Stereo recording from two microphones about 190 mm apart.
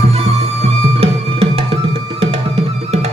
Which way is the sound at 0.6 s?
30° right (ahead or behind).